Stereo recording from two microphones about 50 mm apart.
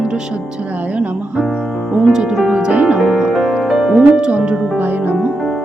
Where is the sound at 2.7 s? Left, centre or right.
Right.